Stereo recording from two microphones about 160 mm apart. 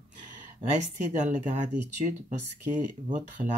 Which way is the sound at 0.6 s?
50° right (ahead or behind).